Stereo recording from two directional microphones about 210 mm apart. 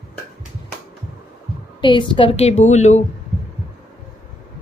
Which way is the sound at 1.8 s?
20° left (ahead or behind).